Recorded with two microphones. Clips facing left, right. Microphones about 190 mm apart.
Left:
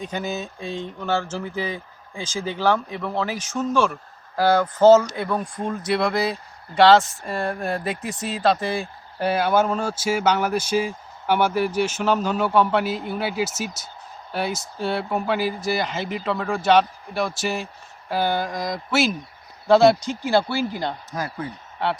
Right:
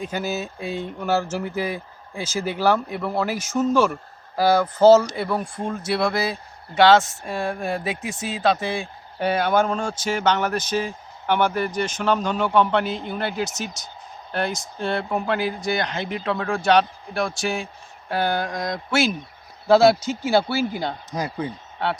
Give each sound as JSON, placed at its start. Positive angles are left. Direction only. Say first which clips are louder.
{"t": 0.0, "sound": "speech", "louder": "right 1 dB", "side_deg": -5}
{"t": 21.1, "sound": "speech", "louder": "right 2 dB", "side_deg": -15}
{"t": 21.8, "sound": "speech", "louder": "left 1 dB", "side_deg": 0}